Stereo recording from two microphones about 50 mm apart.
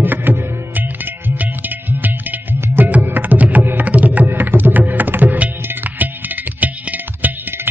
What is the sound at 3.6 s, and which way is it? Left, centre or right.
Tabla, right.